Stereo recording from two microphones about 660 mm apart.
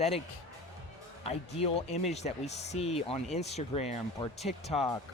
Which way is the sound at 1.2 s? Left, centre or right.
Centre.